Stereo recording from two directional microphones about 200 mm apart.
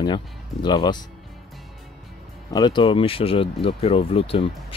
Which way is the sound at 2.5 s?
20° left (ahead or behind).